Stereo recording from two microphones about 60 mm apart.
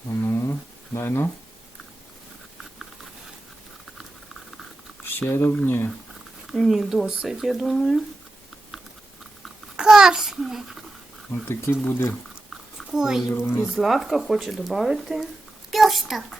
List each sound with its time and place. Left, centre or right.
0.2 s a sound: left
0.9 s speech: left
5.3 s speech: left
6.5 s speech: centre
9.7 s a child's voice: centre
11.4 s speech: left
12.9 s a child's voice: centre
13.3 s speech: left
13.7 s speech: centre